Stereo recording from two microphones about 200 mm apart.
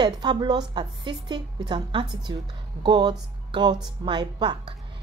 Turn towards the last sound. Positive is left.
turn(degrees=-20)  # may be behind; listen again after turning